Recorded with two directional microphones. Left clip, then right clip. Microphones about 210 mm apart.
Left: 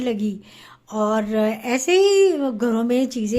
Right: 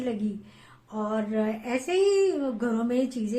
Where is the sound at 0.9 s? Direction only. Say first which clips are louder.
Left 9 dB; 50° left (ahead or behind).